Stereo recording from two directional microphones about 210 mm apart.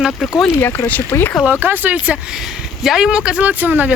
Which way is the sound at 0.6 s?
10° left (ahead or behind).